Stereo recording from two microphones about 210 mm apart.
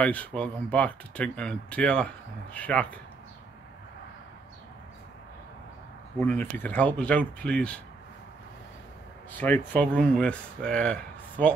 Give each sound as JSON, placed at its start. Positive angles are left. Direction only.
{"t": 0.0, "sound": "speech", "side_deg": 5}
{"t": 6.1, "sound": "speech", "side_deg": 10}
{"t": 9.4, "sound": "speech", "side_deg": 10}